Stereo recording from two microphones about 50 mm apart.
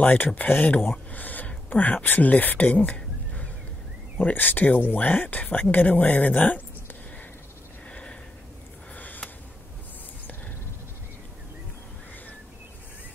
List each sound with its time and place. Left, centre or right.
0.0 s speech: left
7.9 s a sound: left
8.9 s sniff: left